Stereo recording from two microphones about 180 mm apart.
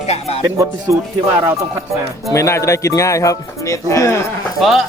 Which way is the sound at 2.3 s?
15° left (ahead or behind).